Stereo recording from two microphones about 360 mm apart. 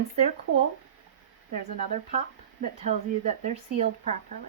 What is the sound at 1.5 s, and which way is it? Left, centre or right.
Speech, centre.